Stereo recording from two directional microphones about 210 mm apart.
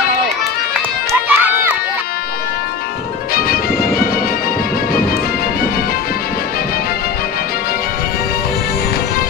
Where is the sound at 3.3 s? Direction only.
45° left (ahead or behind).